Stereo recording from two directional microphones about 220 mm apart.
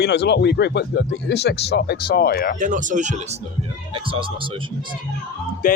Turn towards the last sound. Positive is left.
turn(degrees=40)  # may be behind; listen again after turning